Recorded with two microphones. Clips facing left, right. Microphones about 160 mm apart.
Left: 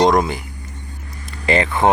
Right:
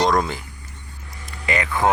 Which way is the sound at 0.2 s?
15° left (ahead or behind).